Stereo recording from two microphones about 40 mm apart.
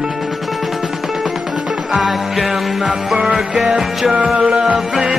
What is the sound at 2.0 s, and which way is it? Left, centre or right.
Music, centre.